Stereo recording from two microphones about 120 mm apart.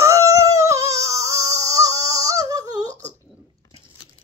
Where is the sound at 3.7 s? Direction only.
45° left (ahead or behind).